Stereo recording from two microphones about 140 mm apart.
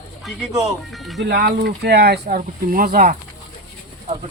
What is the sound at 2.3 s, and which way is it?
Speech, 90° right.